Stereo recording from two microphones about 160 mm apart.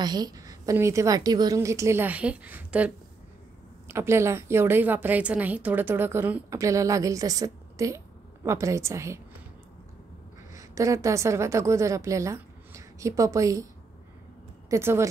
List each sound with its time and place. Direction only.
0.0 s a woman's voice: 25° right (ahead or behind); by 2.9 s 10° right (ahead or behind)
3.9 s a woman's voice: 15° right (ahead or behind)
10.5 s a woman's voice: 20° right (ahead or behind)
14.7 s a woman's voice: 15° right (ahead or behind)